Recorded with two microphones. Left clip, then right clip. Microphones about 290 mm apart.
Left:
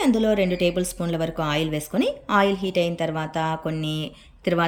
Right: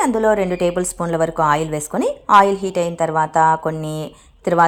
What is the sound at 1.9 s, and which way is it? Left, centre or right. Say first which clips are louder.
A woman's voice: right 9 dB; centre.